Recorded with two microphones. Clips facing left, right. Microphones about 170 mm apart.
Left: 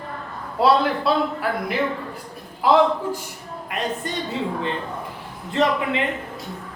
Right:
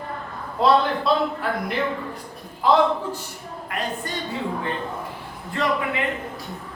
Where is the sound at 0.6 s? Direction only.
5° left (ahead or behind).